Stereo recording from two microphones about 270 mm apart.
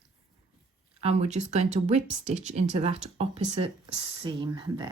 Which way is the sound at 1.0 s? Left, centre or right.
Right.